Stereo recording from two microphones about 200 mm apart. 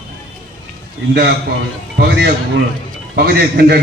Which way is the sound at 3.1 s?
50° right (ahead or behind).